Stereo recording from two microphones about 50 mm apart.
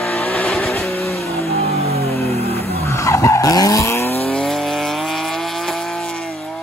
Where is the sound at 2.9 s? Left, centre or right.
Left.